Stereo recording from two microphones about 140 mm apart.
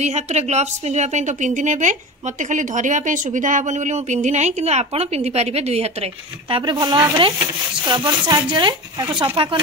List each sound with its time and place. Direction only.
0.0 s a woman's voice: 50° right (ahead or behind)
6.5 s speech: 30° right (ahead or behind)